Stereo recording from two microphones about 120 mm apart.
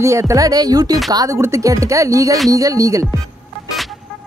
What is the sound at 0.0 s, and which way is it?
Speech, 25° right (ahead or behind).